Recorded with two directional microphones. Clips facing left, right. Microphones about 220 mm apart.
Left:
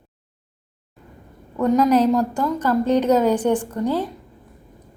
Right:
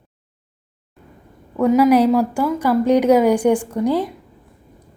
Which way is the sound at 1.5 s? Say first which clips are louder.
Right 3 dB; 10° right (ahead or behind).